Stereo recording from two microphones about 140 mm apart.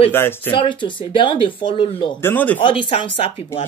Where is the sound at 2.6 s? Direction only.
40° left (ahead or behind).